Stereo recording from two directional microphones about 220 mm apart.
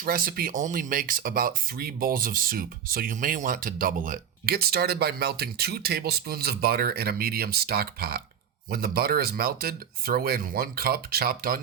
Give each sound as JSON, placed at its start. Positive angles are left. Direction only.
{"t": 0.0, "sound": "speech", "side_deg": -40}